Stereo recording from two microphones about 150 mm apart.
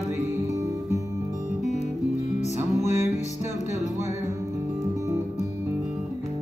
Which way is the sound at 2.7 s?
50° left (ahead or behind).